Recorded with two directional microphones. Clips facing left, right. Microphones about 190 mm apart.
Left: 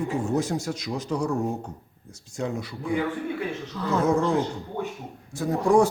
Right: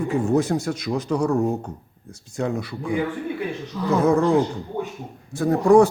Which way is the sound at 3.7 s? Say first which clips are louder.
Right 5 dB; 20° right (ahead or behind).